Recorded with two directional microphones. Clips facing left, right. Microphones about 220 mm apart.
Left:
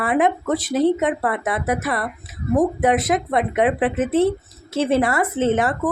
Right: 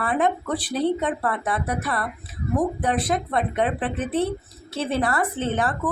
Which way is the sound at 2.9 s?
90° left.